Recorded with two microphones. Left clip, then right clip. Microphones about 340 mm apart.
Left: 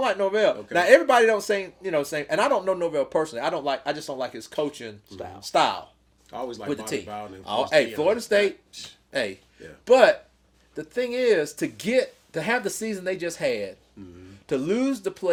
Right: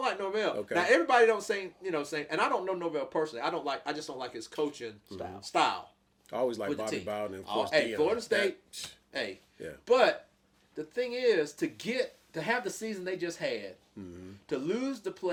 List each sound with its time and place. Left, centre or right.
0.0 s a man's voice: left
5.0 s speech: centre
5.4 s a man's voice: left
6.3 s speech: right
6.7 s a man's voice: left
7.1 s speech: right
7.9 s a man's voice: left
8.7 s speech: right
9.1 s a man's voice: left
14.0 s speech: right
14.4 s a man's voice: left